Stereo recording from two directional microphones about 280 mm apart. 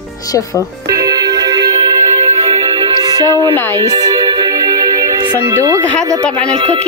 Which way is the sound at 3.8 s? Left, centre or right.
Centre.